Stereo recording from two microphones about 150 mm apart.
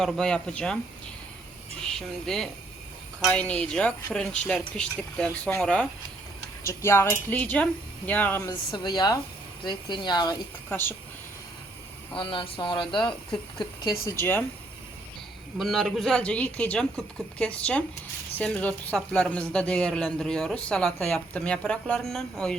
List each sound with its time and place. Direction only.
0.0 s speech: 5° left (ahead or behind)
1.9 s speech: 5° left (ahead or behind)
6.7 s speech: 15° left (ahead or behind)
8.4 s speech: 30° left (ahead or behind)
10.7 s speech: 15° left (ahead or behind)
12.1 s speech: 35° left (ahead or behind)
14.0 s speech: 15° left (ahead or behind)
15.5 s speech: centre (ahead or behind)